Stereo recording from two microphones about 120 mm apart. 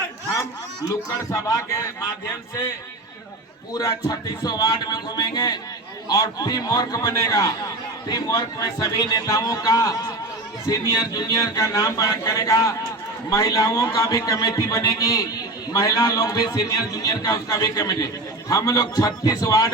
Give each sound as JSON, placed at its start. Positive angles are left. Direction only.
{"t": 0.9, "sound": "a man's voice", "side_deg": 30}